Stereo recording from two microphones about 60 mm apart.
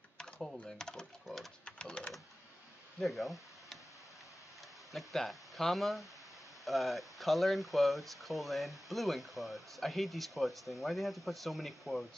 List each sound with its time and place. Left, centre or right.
0.2 s speech: centre
1.6 s speech: centre
3.0 s speech: centre
4.9 s speech: centre